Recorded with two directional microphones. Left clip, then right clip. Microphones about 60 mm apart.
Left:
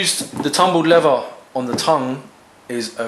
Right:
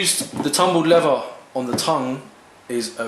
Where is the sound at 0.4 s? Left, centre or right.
Left.